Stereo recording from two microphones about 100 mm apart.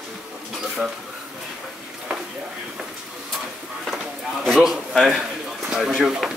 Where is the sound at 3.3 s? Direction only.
Centre (ahead or behind).